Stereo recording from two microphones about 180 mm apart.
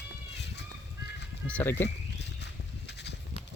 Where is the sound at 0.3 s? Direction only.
70° left (ahead or behind).